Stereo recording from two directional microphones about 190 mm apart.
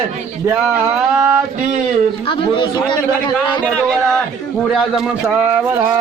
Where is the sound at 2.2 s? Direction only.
25° left (ahead or behind).